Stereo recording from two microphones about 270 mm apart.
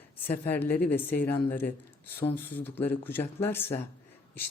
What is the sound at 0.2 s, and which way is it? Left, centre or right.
Speech, centre.